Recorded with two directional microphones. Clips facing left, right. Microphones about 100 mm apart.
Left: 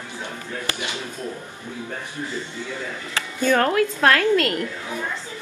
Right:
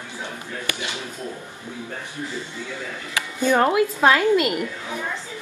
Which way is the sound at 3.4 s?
15° right (ahead or behind).